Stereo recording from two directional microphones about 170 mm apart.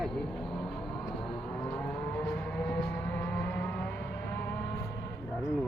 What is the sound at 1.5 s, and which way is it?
Vehicle, 5° left (ahead or behind).